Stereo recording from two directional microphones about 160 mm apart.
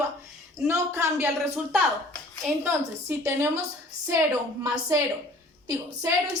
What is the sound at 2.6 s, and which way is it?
Speech, 15° right (ahead or behind).